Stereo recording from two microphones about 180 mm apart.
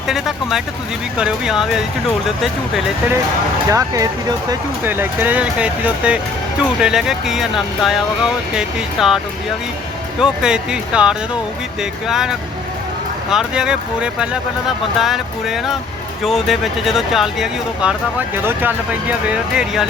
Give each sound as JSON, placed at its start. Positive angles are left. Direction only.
{"t": 0.1, "sound": "speech", "side_deg": 0}
{"t": 3.7, "sound": "speech", "side_deg": -20}
{"t": 13.3, "sound": "speech", "side_deg": -5}